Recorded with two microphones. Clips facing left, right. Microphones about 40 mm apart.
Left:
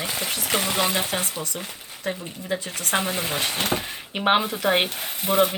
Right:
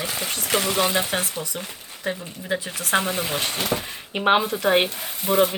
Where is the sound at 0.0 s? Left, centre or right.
Centre.